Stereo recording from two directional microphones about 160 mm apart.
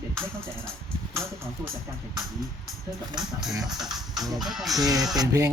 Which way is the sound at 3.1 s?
5° right (ahead or behind).